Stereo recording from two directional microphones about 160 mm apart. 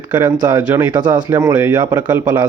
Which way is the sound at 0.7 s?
10° right (ahead or behind).